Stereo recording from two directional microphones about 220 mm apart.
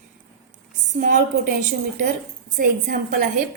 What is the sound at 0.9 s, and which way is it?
A woman's voice, 35° right (ahead or behind).